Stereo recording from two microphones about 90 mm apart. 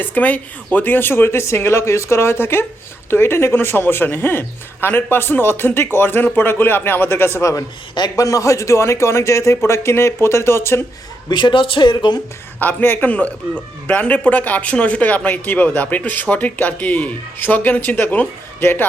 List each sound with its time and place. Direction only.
0.0 s speech: 20° left (ahead or behind)
7.9 s a man's voice: 45° left (ahead or behind); by 10.8 s 25° left (ahead or behind)
11.3 s speech: 60° left (ahead or behind)
12.5 s speech: 20° left (ahead or behind)